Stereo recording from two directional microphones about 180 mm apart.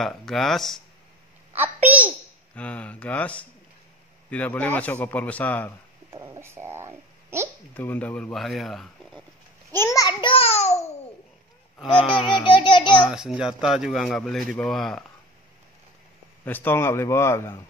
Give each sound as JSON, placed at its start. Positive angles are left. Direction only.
{"t": 0.0, "sound": "speech", "side_deg": 0}
{"t": 1.5, "sound": "babbling", "side_deg": -10}
{"t": 2.5, "sound": "speech", "side_deg": 5}
{"t": 6.0, "sound": "speech", "side_deg": -15}
{"t": 7.7, "sound": "speech", "side_deg": 10}
{"t": 9.7, "sound": "babbling", "side_deg": 15}
{"t": 11.9, "sound": "speech", "side_deg": 30}
{"t": 13.1, "sound": "speech", "side_deg": -5}
{"t": 16.4, "sound": "speech", "side_deg": 10}